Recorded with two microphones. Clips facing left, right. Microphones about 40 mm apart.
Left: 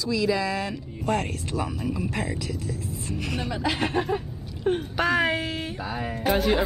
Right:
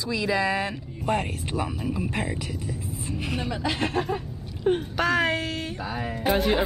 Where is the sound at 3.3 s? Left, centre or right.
Centre.